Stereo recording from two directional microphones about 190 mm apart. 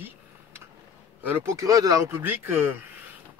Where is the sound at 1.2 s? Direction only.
10° right (ahead or behind).